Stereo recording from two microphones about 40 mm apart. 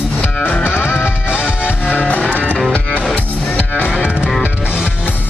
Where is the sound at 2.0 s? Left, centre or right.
Left.